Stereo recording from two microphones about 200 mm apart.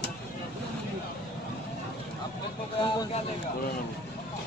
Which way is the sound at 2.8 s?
25° left (ahead or behind).